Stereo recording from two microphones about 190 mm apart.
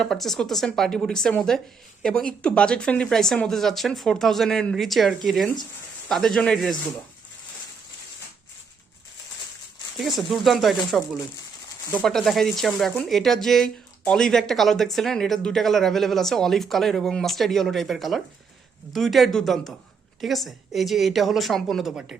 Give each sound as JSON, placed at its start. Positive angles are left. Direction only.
{"t": 0.0, "sound": "speech", "side_deg": 0}
{"t": 10.2, "sound": "speech", "side_deg": 0}
{"t": 12.0, "sound": "speech", "side_deg": 0}